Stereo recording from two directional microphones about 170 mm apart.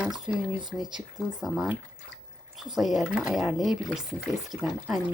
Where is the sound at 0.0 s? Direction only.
5° right (ahead or behind).